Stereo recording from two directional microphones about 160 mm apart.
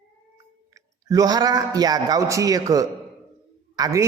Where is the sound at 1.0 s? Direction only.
20° right (ahead or behind).